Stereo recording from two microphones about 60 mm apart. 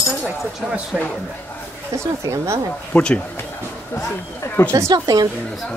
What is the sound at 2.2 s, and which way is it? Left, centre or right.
Speech, right.